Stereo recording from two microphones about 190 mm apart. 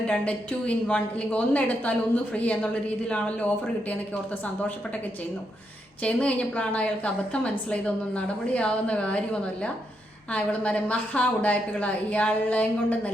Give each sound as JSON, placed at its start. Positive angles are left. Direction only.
{"t": 0.1, "sound": "a woman's voice", "side_deg": 5}
{"t": 6.0, "sound": "a woman's voice", "side_deg": 5}
{"t": 10.3, "sound": "a woman's voice", "side_deg": 5}